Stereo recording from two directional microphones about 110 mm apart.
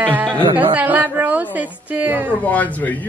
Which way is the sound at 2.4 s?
15° left (ahead or behind).